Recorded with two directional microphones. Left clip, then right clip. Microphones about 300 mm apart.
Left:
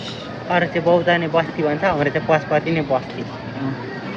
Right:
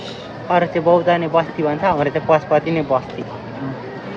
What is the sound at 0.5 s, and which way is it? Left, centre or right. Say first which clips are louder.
Speech: right 2 dB; centre.